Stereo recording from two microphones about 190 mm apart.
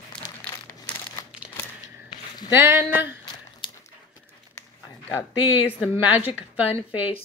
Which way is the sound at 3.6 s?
25° left (ahead or behind).